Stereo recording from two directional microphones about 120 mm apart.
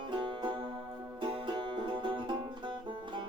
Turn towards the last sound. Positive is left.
turn(degrees=-40)  # may be behind; listen again after turning